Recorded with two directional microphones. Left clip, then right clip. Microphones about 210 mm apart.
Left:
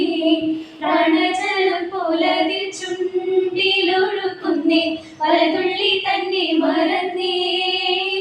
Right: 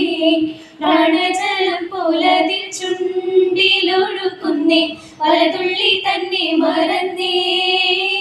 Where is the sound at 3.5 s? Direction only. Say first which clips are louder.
Right 3 dB; 50° right (ahead or behind).